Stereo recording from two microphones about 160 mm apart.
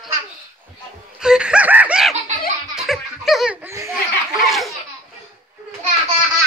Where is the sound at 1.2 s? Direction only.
5° right (ahead or behind).